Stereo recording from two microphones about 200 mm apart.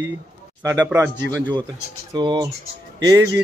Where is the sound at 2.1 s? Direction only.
25° right (ahead or behind).